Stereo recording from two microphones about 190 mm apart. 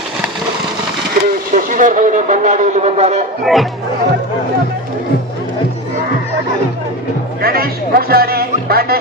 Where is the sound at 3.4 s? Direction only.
Centre (ahead or behind).